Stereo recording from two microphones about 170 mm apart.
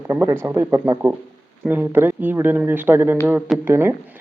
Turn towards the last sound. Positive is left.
turn(degrees=-15)  # may be behind; listen again after turning